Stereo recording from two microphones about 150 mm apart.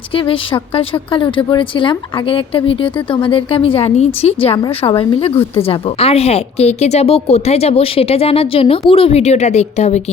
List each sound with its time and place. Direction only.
0.1 s a woman's voice: 35° left (ahead or behind)